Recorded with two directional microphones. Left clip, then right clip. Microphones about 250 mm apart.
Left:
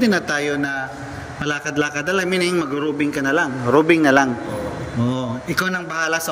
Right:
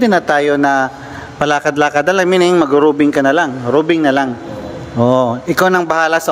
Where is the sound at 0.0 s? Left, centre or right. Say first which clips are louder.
Right 8 dB; centre.